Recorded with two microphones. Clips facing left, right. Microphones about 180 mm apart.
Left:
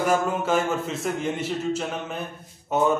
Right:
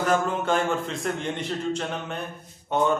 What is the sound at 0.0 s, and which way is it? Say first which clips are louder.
A man's voice: left 1 dB; 10° left (ahead or behind).